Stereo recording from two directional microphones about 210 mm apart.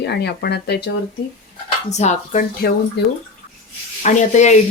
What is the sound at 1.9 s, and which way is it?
Speech, 35° left (ahead or behind).